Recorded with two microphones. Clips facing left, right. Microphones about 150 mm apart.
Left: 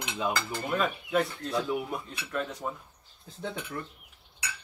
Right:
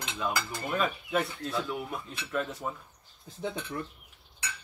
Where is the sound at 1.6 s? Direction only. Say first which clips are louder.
Left 4 dB; 20° left (ahead or behind).